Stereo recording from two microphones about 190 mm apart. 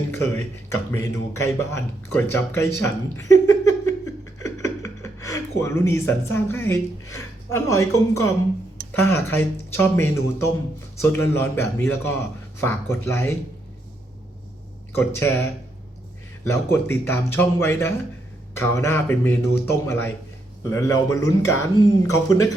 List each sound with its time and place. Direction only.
0.1 s speech: 15° left (ahead or behind)
2.8 s a sound: 15° left (ahead or behind)
4.4 s speech: 15° left (ahead or behind)
14.9 s speech: 15° left (ahead or behind)
16.4 s speech: 15° left (ahead or behind)